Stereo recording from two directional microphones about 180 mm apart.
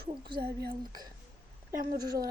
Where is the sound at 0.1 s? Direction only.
25° right (ahead or behind).